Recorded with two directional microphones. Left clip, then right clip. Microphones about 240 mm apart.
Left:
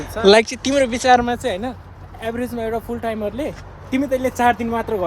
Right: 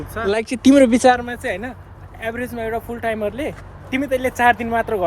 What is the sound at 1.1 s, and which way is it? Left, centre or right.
Speech, left.